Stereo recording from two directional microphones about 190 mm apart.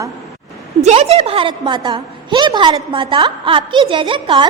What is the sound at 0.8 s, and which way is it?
A woman's voice, 35° right (ahead or behind).